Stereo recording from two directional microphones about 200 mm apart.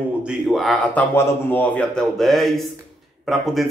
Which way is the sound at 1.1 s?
10° left (ahead or behind).